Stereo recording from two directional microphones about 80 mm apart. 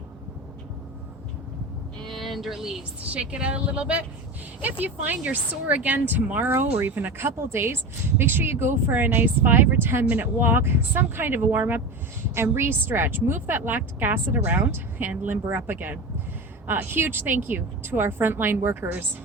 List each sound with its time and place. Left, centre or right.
2.0 s a woman's voice: centre; by 19.0 s right